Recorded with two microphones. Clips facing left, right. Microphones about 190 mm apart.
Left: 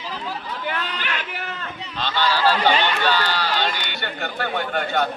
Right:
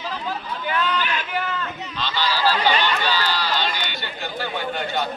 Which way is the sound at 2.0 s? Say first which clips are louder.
Left 3 dB; 55° left (ahead or behind).